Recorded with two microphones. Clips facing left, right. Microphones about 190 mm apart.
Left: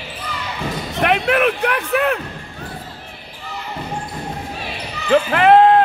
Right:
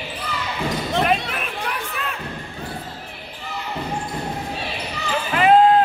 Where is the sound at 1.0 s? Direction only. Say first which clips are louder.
Left 11 dB; 70° left (ahead or behind).